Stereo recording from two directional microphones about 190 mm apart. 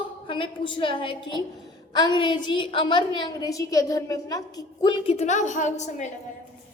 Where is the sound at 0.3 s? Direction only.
25° left (ahead or behind).